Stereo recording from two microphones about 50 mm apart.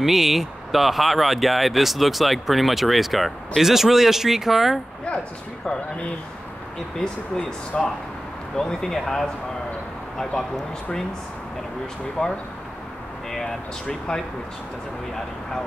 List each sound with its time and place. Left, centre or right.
0.0 s speech: centre
7.7 s speech: centre
12.2 s speech: centre